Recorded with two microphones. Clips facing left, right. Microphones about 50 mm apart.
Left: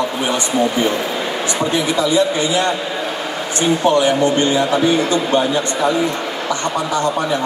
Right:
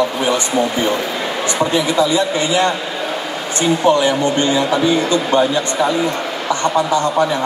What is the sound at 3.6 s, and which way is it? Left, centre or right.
A man's voice, left.